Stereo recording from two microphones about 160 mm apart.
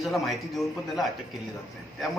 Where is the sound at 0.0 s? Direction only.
Centre (ahead or behind).